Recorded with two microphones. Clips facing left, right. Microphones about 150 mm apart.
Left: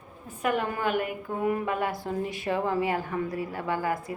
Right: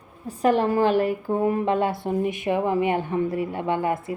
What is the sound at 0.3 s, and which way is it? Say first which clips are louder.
A woman's voice: right 8 dB; 35° right (ahead or behind).